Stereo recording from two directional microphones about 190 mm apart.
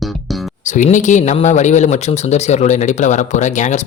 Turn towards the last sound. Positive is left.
turn(degrees=40)  # may be behind; listen again after turning